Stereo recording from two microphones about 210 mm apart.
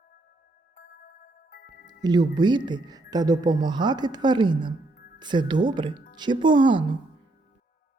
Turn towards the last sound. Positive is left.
turn(degrees=-20)  # may be behind; listen again after turning